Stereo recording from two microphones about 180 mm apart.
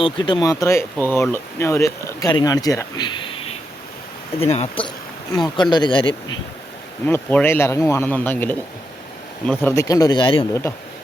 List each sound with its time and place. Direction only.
0.0 s speech: 25° left (ahead or behind)
4.4 s speech: 35° left (ahead or behind)
7.0 s speech: 10° left (ahead or behind); by 10.4 s 25° left (ahead or behind)
10.5 s speech: 15° left (ahead or behind)